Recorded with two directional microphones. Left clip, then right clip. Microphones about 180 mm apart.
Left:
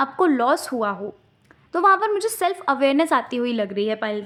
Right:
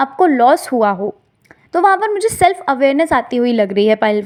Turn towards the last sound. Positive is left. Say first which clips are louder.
# right 11 dB
turn(degrees=-35)  # may be behind; listen again after turning